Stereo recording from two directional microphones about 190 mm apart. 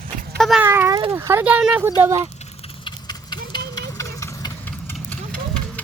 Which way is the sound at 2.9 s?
20° left (ahead or behind).